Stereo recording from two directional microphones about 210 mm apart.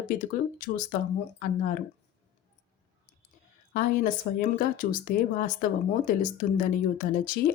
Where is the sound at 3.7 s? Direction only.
40° left (ahead or behind).